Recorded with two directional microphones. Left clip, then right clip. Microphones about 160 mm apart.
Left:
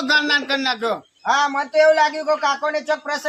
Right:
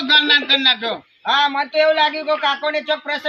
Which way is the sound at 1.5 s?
10° right (ahead or behind).